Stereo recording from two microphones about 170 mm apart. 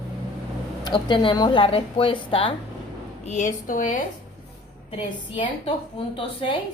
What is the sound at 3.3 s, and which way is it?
Speech, 45° left (ahead or behind).